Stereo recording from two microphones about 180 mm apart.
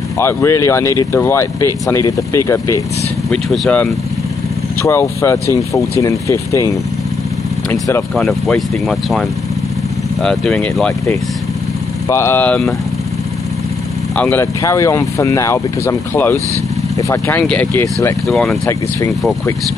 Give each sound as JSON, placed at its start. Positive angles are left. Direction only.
{"t": 0.2, "sound": "speech", "side_deg": 15}
{"t": 3.3, "sound": "speech", "side_deg": 0}
{"t": 4.8, "sound": "speech", "side_deg": 15}
{"t": 8.2, "sound": "speech", "side_deg": 0}
{"t": 10.2, "sound": "speech", "side_deg": 5}
{"t": 12.1, "sound": "speech", "side_deg": 15}
{"t": 14.1, "sound": "speech", "side_deg": 10}
{"t": 18.7, "sound": "speech", "side_deg": 20}